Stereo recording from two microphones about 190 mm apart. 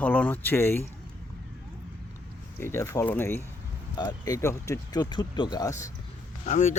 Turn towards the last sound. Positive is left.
turn(degrees=40)  # may be behind; listen again after turning